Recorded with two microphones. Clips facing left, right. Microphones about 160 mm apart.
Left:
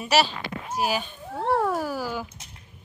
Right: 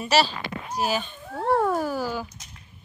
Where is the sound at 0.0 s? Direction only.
10° left (ahead or behind).